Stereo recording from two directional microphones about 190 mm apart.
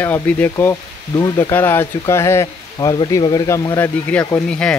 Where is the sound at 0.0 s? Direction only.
10° left (ahead or behind).